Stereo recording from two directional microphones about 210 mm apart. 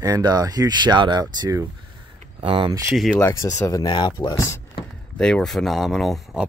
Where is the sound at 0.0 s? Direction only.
20° right (ahead or behind).